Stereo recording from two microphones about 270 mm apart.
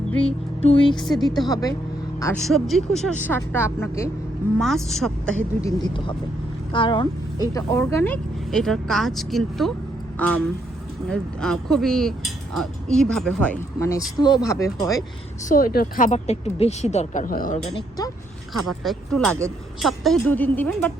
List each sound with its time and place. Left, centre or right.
0.2 s speech: left
0.9 s speech: centre
5.6 s speech: centre
15.4 s speech: left
18.8 s speech: centre